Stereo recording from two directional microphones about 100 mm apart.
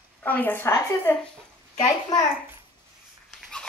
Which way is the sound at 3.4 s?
5° left (ahead or behind).